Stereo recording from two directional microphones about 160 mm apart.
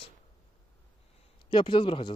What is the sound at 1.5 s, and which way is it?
Speech, 30° left (ahead or behind).